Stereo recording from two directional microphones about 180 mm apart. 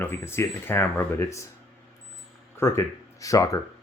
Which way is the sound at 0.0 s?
15° left (ahead or behind).